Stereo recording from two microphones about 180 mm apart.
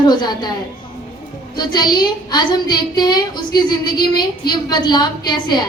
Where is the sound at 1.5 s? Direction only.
25° left (ahead or behind).